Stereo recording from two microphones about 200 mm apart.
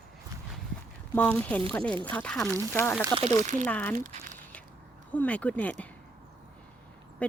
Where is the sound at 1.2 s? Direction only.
5° left (ahead or behind).